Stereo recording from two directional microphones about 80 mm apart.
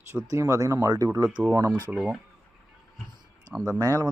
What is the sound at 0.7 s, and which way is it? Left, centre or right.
Speech, right.